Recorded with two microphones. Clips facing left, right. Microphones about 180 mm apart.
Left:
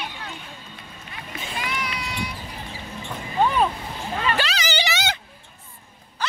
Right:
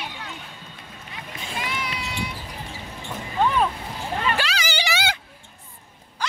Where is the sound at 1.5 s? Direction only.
25° right (ahead or behind).